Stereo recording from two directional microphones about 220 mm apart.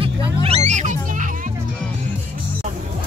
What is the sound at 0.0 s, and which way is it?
Music, 25° right (ahead or behind).